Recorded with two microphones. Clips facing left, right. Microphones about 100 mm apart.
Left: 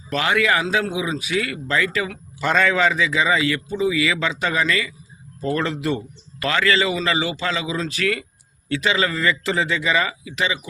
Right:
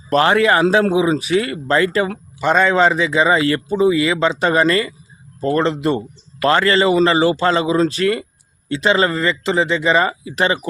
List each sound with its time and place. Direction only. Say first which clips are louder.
0.1 s a man's voice: right 6 dB; 40° right (ahead or behind)
2.4 s a man's voice: right 5 dB; 20° right (ahead or behind); by 4.9 s 40° right (ahead or behind)
5.5 s a man's voice: right 7 dB; 30° right (ahead or behind); by 10.7 s 45° right (ahead or behind)